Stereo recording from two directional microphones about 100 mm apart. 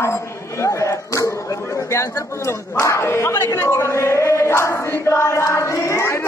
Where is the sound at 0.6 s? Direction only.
30° left (ahead or behind).